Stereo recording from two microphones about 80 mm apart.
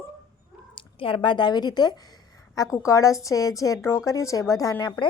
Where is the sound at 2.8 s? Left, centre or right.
Left.